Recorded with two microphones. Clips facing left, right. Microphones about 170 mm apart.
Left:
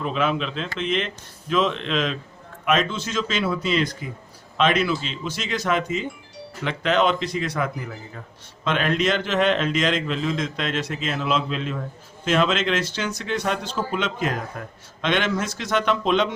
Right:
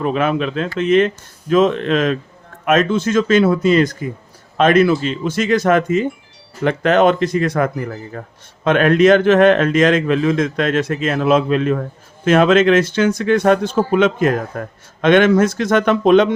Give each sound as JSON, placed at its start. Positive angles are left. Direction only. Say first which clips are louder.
{"t": 0.0, "sound": "a man's voice", "louder": "right 6 dB", "side_deg": -50}